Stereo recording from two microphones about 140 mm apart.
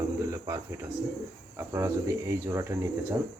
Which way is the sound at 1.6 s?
20° right (ahead or behind).